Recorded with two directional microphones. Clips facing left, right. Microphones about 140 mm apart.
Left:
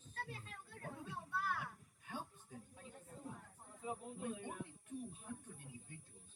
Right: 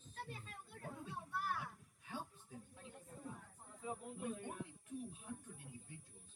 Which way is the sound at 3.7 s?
15° left (ahead or behind).